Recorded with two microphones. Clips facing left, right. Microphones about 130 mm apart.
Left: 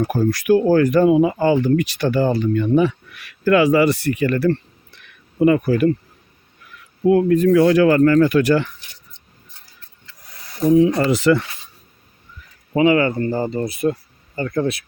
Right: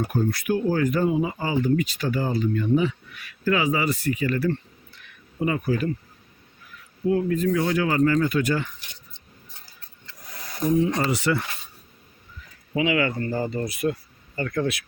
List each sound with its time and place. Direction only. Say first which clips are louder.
0.1 s speech: left 8 dB; 90° left; by 5.9 s 70° left (ahead or behind)
7.0 s speech: left 8 dB; 75° left (ahead or behind)
10.8 s speech: left 8 dB; 75° left (ahead or behind)
12.7 s speech: left 8 dB; 40° left (ahead or behind)